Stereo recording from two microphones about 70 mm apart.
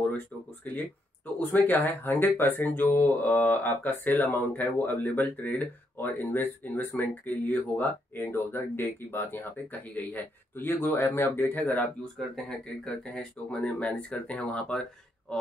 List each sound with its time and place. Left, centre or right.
1.4 s speech: left
12.2 s speech: centre